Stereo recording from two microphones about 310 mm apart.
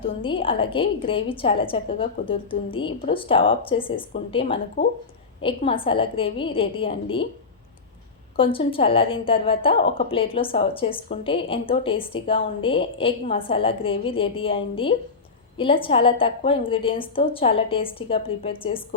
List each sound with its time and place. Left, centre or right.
0.0 s a woman's voice: centre
8.4 s a woman's voice: centre